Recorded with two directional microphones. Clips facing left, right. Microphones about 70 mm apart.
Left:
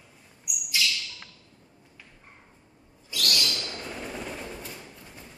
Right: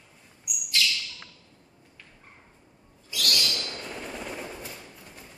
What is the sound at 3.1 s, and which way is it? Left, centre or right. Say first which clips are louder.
Owl: even; centre.